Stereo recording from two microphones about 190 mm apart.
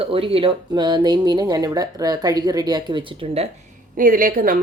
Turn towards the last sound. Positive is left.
turn(degrees=-50)  # may be behind; listen again after turning